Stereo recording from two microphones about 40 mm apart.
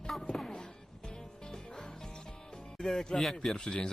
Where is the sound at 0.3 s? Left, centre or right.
Centre.